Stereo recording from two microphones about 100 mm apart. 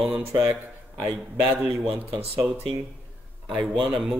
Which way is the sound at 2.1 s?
20° right (ahead or behind).